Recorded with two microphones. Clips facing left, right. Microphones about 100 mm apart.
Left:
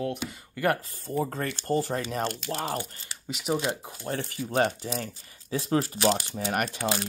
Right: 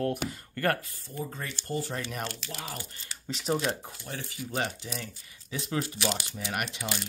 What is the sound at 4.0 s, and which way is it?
Speech, 50° left (ahead or behind).